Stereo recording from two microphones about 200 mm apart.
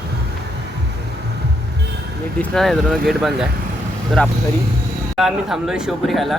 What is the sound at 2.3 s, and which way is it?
A man's voice, centre (ahead or behind).